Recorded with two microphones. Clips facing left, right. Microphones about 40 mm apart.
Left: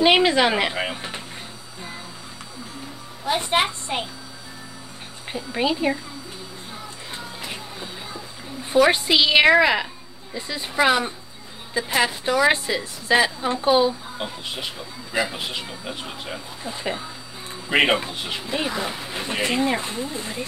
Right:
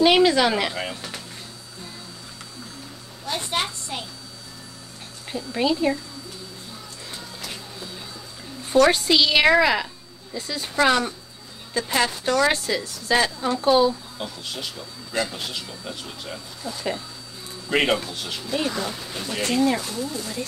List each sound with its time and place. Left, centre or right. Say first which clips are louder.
0.0 s a woman's voice: even; left
3.3 s a woman's voice: left 5 dB; left
5.3 s a woman's voice: even; left
7.2 s music: left 3 dB; left
8.7 s a woman's voice: even; centre